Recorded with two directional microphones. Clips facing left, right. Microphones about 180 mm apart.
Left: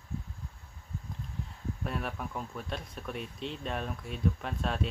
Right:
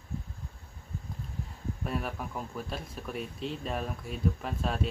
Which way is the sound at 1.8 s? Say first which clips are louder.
Right 2 dB; centre (ahead or behind).